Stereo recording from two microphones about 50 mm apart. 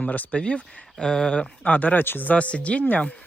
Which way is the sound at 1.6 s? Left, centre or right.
Left.